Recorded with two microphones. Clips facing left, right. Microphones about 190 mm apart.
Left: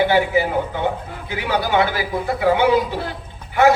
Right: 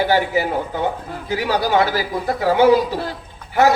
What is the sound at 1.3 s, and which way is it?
A man's voice, 40° right (ahead or behind).